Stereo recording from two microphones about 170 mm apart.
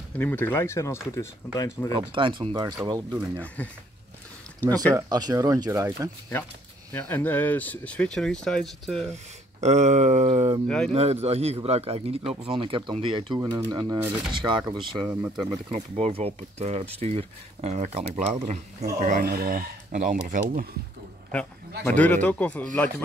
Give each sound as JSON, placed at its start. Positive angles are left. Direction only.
{"t": 0.2, "sound": "speech", "side_deg": 10}
{"t": 2.0, "sound": "speech", "side_deg": -30}
{"t": 3.6, "sound": "speech", "side_deg": 10}
{"t": 4.9, "sound": "speech", "side_deg": -20}
{"t": 6.9, "sound": "speech", "side_deg": 10}
{"t": 9.6, "sound": "speech", "side_deg": -40}
{"t": 13.4, "sound": "speech", "side_deg": -20}
{"t": 15.3, "sound": "speech", "side_deg": 0}
{"t": 15.7, "sound": "speech", "side_deg": -40}
{"t": 19.2, "sound": "speech", "side_deg": -65}
{"t": 21.8, "sound": "speech", "side_deg": 10}